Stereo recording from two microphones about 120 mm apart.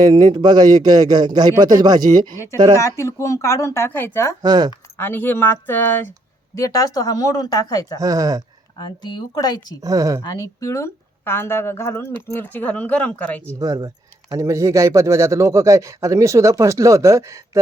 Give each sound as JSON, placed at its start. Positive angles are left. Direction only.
{"t": 0.0, "sound": "a man's voice", "side_deg": -35}
{"t": 2.8, "sound": "speech", "side_deg": 25}
{"t": 4.4, "sound": "a man's voice", "side_deg": -35}
{"t": 4.9, "sound": "speech", "side_deg": 15}
{"t": 6.6, "sound": "speech", "side_deg": 30}
{"t": 7.9, "sound": "speech", "side_deg": -30}
{"t": 8.8, "sound": "speech", "side_deg": 35}
{"t": 9.8, "sound": "speech", "side_deg": -30}
{"t": 10.2, "sound": "speech", "side_deg": 30}
{"t": 13.6, "sound": "speech", "side_deg": -30}